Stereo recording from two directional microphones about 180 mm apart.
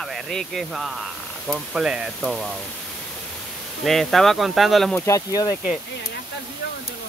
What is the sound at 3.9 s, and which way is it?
Speech, centre (ahead or behind).